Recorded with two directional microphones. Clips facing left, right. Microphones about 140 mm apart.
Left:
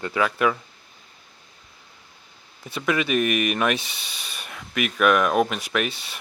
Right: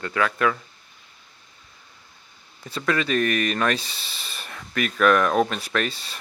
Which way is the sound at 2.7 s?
15° left (ahead or behind).